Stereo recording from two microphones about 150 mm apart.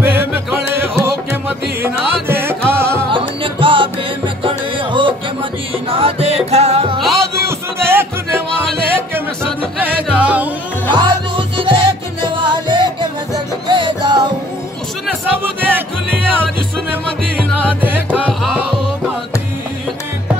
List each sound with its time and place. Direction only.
0.0 s music: 15° right (ahead or behind)
3.1 s music: 35° right (ahead or behind)
7.0 s music: centre (ahead or behind)
7.4 s music: 15° right (ahead or behind)
9.8 s music: 10° right (ahead or behind)
10.9 s music: 30° right (ahead or behind)
15.6 s music: 15° right (ahead or behind)
17.4 s music: 10° right (ahead or behind)